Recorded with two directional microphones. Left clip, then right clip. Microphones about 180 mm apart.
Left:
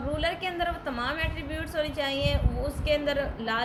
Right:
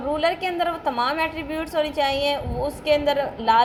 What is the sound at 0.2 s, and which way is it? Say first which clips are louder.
A woman's voice: right 6 dB; 15° right (ahead or behind).